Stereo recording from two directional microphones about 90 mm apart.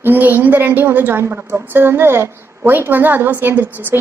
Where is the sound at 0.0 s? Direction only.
20° right (ahead or behind).